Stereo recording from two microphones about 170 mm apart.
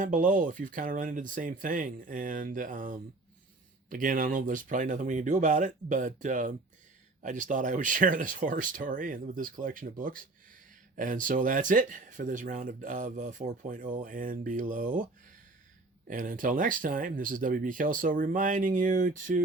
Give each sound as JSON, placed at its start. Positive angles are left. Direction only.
{"t": 0.0, "sound": "speech", "side_deg": -50}
{"t": 16.0, "sound": "speech", "side_deg": -50}